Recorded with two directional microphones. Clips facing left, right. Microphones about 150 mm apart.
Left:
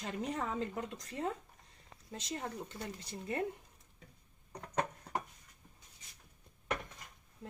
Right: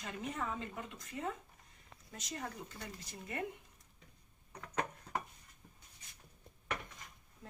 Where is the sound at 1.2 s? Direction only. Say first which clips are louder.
Left 3 dB; 45° left (ahead or behind).